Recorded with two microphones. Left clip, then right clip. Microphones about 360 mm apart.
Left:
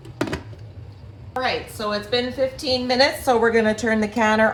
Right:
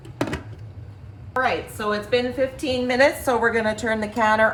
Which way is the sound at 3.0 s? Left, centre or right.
Centre.